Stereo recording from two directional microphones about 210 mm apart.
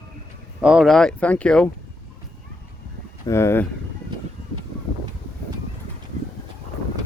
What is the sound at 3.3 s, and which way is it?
Speech, 10° left (ahead or behind).